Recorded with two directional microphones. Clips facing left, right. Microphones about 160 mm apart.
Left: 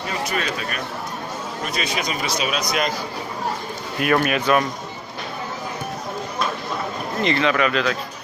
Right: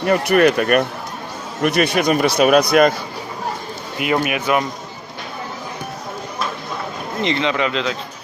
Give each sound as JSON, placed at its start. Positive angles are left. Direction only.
{"t": 0.0, "sound": "speech", "side_deg": -60}
{"t": 4.0, "sound": "speech", "side_deg": -15}
{"t": 7.2, "sound": "speech", "side_deg": -20}